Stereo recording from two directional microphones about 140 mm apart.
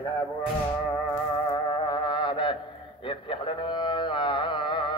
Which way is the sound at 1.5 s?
30° left (ahead or behind).